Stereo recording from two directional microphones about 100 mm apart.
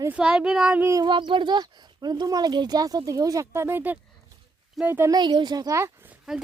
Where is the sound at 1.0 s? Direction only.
55° right (ahead or behind); by 3.4 s 35° right (ahead or behind).